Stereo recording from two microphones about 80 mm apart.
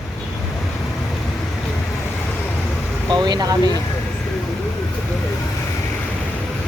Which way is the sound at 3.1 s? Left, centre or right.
Right.